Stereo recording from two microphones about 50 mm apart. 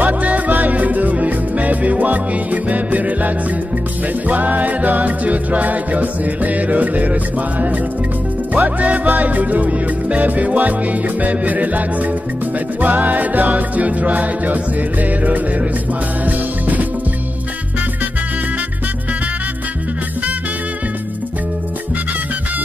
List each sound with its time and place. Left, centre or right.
0.0 s music: right